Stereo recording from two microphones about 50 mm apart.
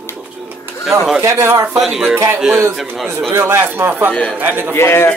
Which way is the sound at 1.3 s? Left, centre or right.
Right.